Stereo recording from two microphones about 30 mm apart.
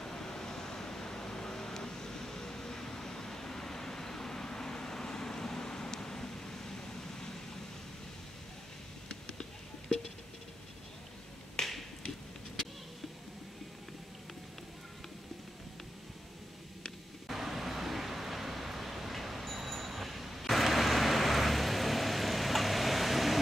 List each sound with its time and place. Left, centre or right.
0.0 s vehicle: centre
9.1 s a sound: left
11.6 s finger snapping: left
17.3 s vehicle: centre